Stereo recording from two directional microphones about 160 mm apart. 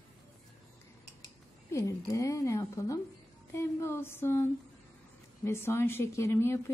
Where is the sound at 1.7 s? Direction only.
20° left (ahead or behind).